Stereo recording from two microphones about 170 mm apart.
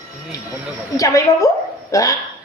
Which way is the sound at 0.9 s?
20° left (ahead or behind).